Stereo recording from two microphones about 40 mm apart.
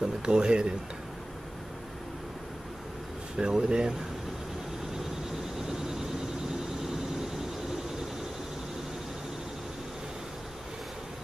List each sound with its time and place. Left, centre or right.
0.0 s speech: right
3.3 s speech: right
5.6 s vehicle: centre